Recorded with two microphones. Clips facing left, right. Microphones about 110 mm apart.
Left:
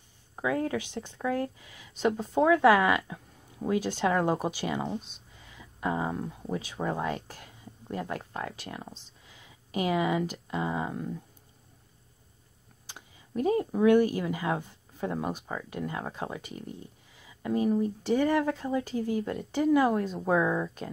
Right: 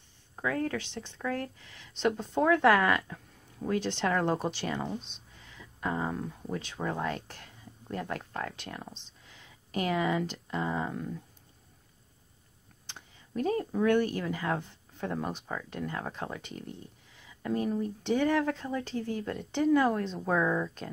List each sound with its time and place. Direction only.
0.4 s speech: 15° left (ahead or behind)
12.8 s speech: 10° left (ahead or behind)